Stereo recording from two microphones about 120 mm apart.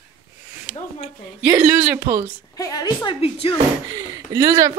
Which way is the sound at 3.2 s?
55° left (ahead or behind).